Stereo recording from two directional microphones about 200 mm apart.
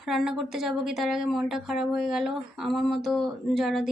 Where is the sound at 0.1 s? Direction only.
Centre (ahead or behind).